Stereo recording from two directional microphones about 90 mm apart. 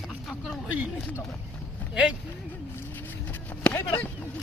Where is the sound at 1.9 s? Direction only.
10° right (ahead or behind).